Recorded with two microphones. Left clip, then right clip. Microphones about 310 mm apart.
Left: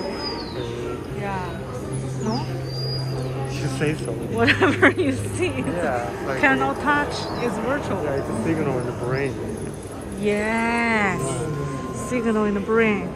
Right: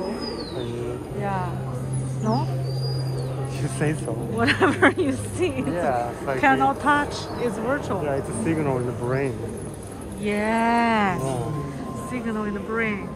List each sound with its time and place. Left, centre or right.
4.4 s speech: centre
8.5 s speech: right
10.2 s speech: centre